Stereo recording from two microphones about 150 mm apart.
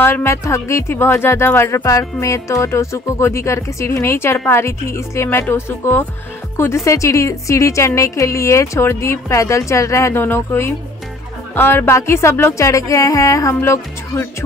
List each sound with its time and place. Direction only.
0.0 s a woman's voice: 15° left (ahead or behind)